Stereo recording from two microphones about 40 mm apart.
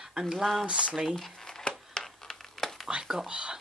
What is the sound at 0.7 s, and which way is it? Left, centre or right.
Speech, right.